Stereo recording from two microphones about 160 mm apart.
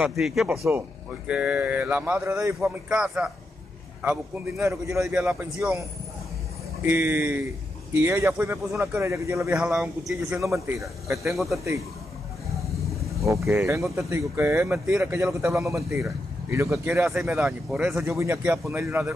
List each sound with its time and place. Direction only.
0.0 s a man's voice: centre (ahead or behind)
6.8 s a man's voice: 10° right (ahead or behind)
9.6 s a man's voice: 5° right (ahead or behind)
10.3 s a man's voice: 15° right (ahead or behind)
11.3 s a man's voice: centre (ahead or behind)
13.5 s a man's voice: 15° right (ahead or behind)
15.4 s speech: 20° right (ahead or behind)
17.2 s a man's voice: 5° right (ahead or behind)
18.0 s speech: 15° right (ahead or behind)